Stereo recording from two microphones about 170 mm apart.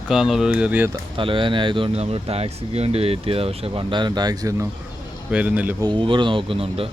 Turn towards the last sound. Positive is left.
turn(degrees=-35)  # may be behind; listen again after turning